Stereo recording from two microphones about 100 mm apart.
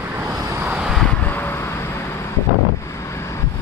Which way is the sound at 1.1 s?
15° left (ahead or behind).